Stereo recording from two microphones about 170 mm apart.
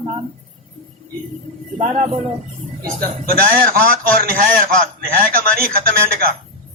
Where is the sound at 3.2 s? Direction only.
60° right (ahead or behind).